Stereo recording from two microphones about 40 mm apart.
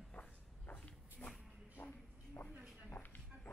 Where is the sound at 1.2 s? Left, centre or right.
Left.